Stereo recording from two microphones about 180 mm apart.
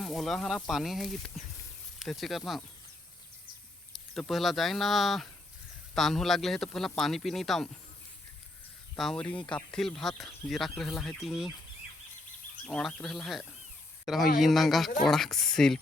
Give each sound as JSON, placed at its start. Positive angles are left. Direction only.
{"t": 0.0, "sound": "speech", "side_deg": 0}
{"t": 4.1, "sound": "speech", "side_deg": 0}
{"t": 9.0, "sound": "speech", "side_deg": 5}
{"t": 12.6, "sound": "speech", "side_deg": 0}